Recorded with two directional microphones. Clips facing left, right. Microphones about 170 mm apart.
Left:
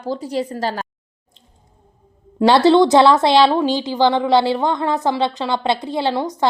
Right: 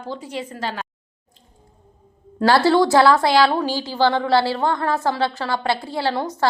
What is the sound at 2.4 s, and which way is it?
A woman's voice, 20° left (ahead or behind).